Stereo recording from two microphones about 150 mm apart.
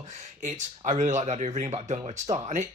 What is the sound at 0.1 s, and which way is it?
Speech, 55° right (ahead or behind).